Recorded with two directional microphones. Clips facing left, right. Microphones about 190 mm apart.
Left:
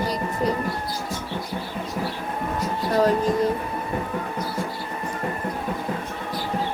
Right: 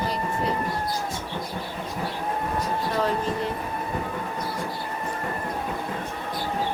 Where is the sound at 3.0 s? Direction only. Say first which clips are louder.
Left 8 dB; 40° left (ahead or behind).